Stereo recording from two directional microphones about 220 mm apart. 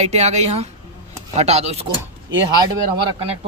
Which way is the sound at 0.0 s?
30° right (ahead or behind).